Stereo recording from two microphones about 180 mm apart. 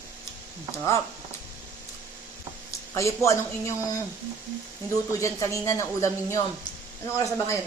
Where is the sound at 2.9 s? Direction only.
15° left (ahead or behind).